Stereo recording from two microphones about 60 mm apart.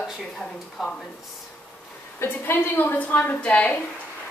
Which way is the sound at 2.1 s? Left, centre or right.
Left.